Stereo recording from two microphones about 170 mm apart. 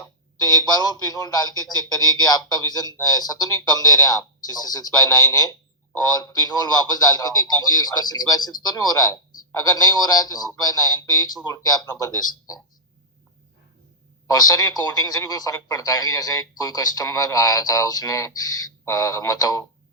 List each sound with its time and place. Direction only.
0.4 s a man's voice: 20° left (ahead or behind)
14.3 s a man's voice: 20° left (ahead or behind)